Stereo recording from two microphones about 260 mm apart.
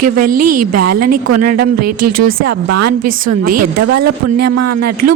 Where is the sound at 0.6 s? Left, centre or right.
Right.